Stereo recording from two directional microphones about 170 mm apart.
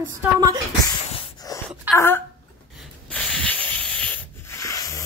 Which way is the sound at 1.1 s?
20° left (ahead or behind).